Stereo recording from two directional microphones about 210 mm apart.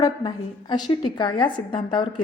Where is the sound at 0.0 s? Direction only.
20° left (ahead or behind).